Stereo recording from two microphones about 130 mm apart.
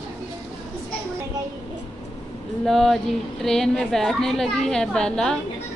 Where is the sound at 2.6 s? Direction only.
Centre (ahead or behind).